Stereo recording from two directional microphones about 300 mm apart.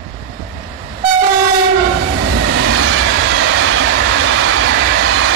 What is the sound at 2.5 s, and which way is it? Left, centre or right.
Train, right.